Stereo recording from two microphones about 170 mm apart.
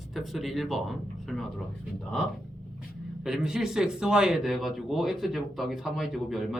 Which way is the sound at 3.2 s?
5° right (ahead or behind).